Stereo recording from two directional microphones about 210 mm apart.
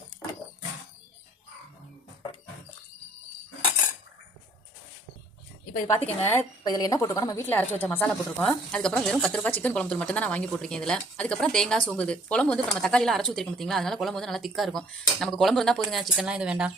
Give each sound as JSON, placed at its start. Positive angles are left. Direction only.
{"t": 6.0, "sound": "a woman's voice", "side_deg": 30}
{"t": 6.2, "sound": "a woman's voice", "side_deg": 15}